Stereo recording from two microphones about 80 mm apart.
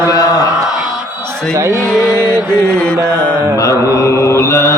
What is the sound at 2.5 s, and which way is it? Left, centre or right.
Mantra, centre.